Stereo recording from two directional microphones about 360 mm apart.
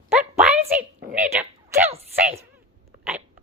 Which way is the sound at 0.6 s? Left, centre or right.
Right.